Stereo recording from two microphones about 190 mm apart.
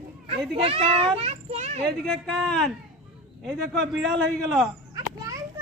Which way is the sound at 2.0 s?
5° left (ahead or behind).